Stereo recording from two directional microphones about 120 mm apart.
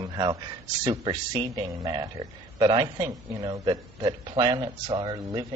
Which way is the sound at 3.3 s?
25° right (ahead or behind).